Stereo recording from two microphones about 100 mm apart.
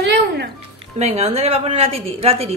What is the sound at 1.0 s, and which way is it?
A woman's voice, 90° right.